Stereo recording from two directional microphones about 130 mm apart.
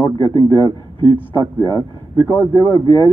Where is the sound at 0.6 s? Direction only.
40° right (ahead or behind).